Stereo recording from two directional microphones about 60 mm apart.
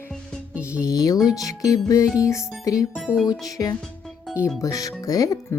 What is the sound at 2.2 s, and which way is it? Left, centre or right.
Music, left.